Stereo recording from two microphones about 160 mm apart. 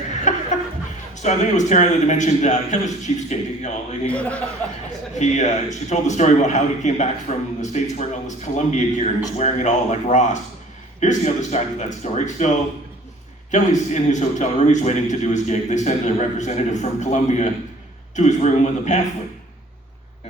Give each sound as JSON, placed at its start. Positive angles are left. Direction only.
{"t": 0.3, "sound": "a sound", "side_deg": 50}
{"t": 1.1, "sound": "a man's voice", "side_deg": 50}
{"t": 4.0, "sound": "speech", "side_deg": 10}
{"t": 5.2, "sound": "a man's voice", "side_deg": 50}
{"t": 13.5, "sound": "a man's voice", "side_deg": 50}